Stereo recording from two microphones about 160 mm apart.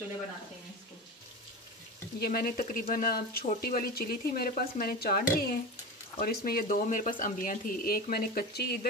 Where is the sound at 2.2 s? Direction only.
70° left (ahead or behind).